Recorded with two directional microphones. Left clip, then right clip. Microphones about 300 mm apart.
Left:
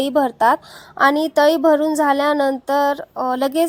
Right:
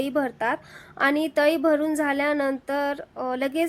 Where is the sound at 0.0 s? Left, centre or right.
Centre.